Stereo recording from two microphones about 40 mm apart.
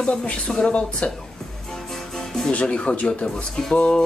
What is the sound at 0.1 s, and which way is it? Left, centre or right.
Speech, left.